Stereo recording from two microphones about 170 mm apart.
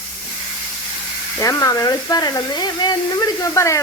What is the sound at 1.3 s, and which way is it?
Speech, 20° left (ahead or behind).